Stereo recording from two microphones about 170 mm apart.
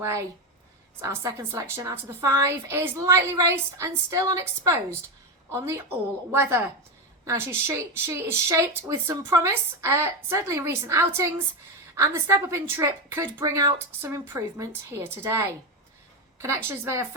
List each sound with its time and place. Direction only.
1.0 s a woman's voice: 15° right (ahead or behind)